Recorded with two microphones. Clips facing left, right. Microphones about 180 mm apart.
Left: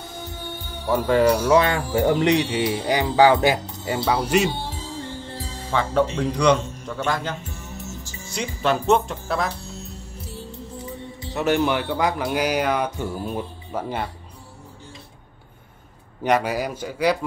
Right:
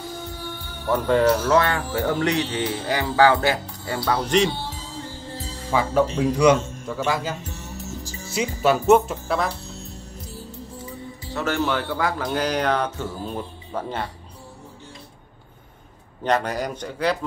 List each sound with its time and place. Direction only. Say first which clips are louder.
0.8 s speech: left 1 dB; 5° left (ahead or behind)
4.1 s speech: even; 10° left (ahead or behind)
5.7 s a man's voice: right 1 dB; 10° right (ahead or behind)
7.4 s music: right 1 dB; 40° right (ahead or behind)
8.3 s speech: right 3 dB; 5° right (ahead or behind)
11.3 s speech: left 3 dB; 15° left (ahead or behind)
16.3 s speech: left 2 dB; 10° left (ahead or behind)